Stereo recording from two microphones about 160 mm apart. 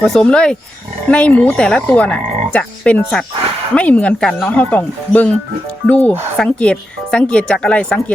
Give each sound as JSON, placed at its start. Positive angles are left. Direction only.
{"t": 0.0, "sound": "speech", "side_deg": 5}
{"t": 1.0, "sound": "frog", "side_deg": 10}